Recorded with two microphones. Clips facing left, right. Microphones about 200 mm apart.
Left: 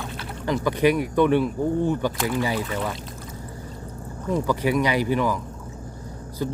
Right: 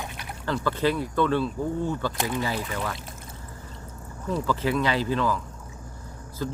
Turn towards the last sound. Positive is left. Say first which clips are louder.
# left 4 dB
turn(degrees=20)  # may be behind; listen again after turning